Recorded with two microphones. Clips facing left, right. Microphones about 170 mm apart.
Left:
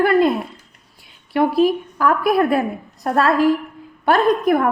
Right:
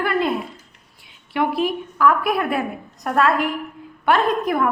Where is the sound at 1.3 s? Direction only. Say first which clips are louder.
Left 5 dB; 40° left (ahead or behind).